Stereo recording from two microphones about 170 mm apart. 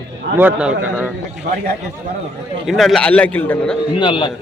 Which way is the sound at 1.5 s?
60° right (ahead or behind).